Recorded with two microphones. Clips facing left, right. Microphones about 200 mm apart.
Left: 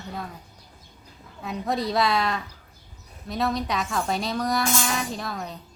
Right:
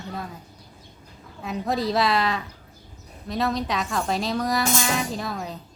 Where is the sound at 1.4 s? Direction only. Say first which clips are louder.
Right 1 dB; centre (ahead or behind).